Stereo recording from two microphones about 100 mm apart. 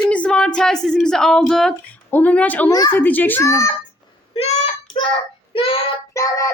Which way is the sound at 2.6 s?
40° left (ahead or behind).